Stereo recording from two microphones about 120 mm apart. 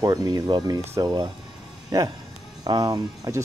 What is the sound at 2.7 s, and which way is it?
Speech, 30° right (ahead or behind).